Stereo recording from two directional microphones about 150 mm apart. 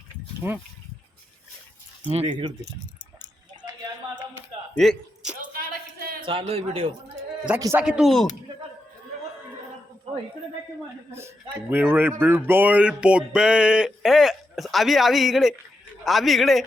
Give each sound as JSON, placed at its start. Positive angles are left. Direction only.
{"t": 0.4, "sound": "a man's voice", "side_deg": -15}
{"t": 2.0, "sound": "speech", "side_deg": -45}
{"t": 4.7, "sound": "speech", "side_deg": 0}
{"t": 5.5, "sound": "a sound", "side_deg": -80}
{"t": 6.2, "sound": "a man's voice", "side_deg": -35}
{"t": 7.8, "sound": "music", "side_deg": -5}
{"t": 11.1, "sound": "a man's voice", "side_deg": -15}
{"t": 12.2, "sound": "music", "side_deg": -15}